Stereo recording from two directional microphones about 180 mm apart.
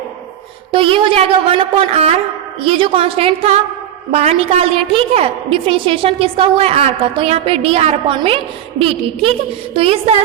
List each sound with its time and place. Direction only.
0.7 s a woman's voice: 30° right (ahead or behind)